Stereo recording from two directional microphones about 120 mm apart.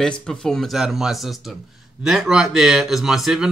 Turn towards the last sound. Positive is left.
turn(degrees=-5)  # may be behind; listen again after turning